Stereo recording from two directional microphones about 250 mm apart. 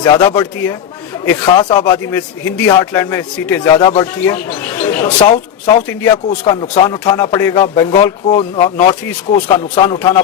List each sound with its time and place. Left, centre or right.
0.0 s speech: centre